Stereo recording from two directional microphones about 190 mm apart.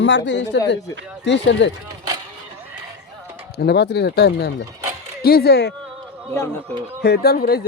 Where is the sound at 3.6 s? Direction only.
60° left (ahead or behind).